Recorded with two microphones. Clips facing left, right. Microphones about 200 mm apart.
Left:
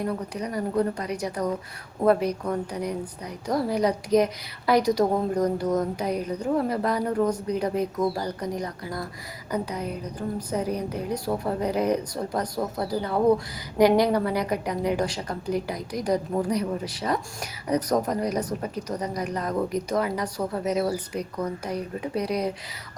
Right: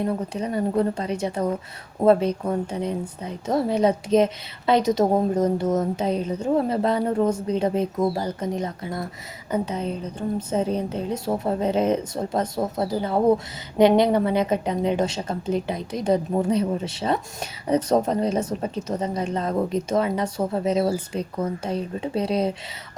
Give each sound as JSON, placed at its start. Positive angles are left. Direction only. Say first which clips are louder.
{"t": 0.0, "sound": "a woman's voice", "louder": "right 3 dB", "side_deg": -25}